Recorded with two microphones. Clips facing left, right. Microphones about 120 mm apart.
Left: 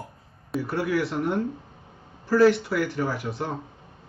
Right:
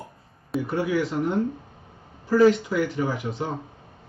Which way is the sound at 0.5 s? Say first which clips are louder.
Right 1 dB; 5° left (ahead or behind).